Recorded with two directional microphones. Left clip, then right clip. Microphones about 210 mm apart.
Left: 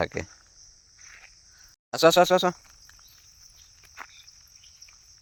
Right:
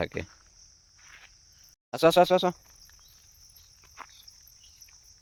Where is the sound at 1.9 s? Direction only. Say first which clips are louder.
Left 2 dB; 10° right (ahead or behind).